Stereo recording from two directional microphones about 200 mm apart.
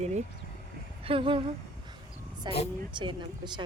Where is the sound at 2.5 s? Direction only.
20° right (ahead or behind).